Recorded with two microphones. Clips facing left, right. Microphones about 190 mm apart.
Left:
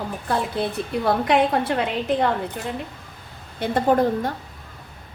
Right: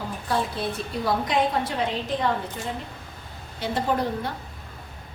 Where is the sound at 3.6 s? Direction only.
50° left (ahead or behind).